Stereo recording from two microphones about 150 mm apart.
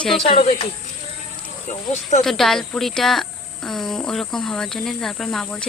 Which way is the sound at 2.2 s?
Centre (ahead or behind).